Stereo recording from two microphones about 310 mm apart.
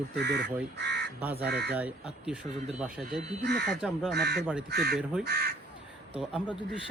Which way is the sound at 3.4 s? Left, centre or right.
Right.